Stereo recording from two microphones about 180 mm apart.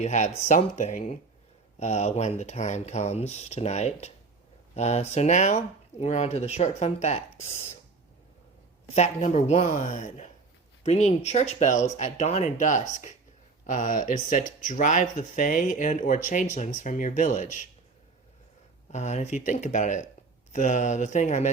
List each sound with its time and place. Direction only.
0.0 s speech: 40° left (ahead or behind)
8.9 s speech: 35° left (ahead or behind)
18.9 s speech: 40° left (ahead or behind)